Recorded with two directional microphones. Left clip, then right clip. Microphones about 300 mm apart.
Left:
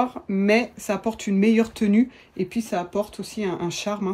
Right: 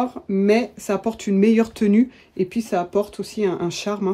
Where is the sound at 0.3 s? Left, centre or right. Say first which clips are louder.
Right 4 dB; left.